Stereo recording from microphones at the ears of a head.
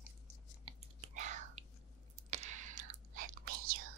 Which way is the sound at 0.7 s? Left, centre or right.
Right.